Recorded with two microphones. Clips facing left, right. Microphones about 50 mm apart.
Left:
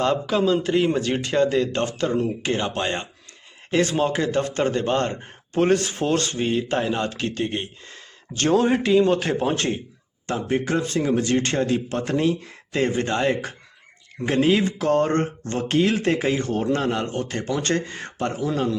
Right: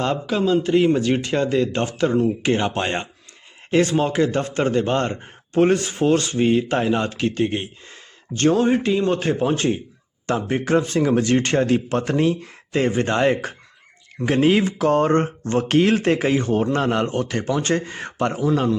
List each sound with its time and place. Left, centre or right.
0.0 s a man's voice: centre
3.7 s speech: centre
8.4 s a man's voice: centre
8.8 s a man's voice: centre
10.2 s a man's voice: right
13.1 s a man's voice: right
15.8 s speech: right
16.7 s a man's voice: right
17.5 s speech: centre